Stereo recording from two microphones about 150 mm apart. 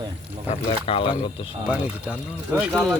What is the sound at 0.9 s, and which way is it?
Speech, 35° left (ahead or behind).